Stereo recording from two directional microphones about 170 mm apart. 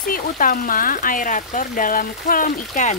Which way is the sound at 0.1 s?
50° left (ahead or behind).